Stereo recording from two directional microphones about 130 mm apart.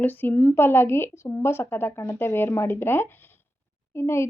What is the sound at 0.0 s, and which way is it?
A woman's voice, 15° left (ahead or behind).